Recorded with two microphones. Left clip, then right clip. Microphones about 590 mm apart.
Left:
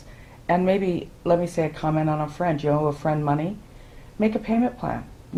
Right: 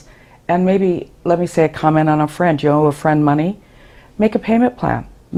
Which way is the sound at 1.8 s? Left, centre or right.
Right.